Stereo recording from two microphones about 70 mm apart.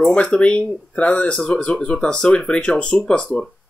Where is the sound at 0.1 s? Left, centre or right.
Centre.